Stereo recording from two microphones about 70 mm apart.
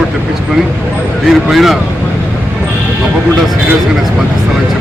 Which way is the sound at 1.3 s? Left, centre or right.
Centre.